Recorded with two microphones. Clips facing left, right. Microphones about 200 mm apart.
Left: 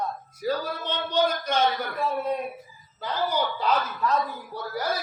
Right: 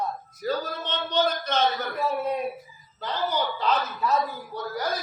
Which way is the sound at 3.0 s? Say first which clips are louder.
Left 1 dB; 10° left (ahead or behind).